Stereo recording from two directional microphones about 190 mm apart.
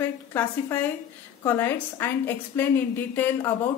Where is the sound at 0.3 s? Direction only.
10° left (ahead or behind).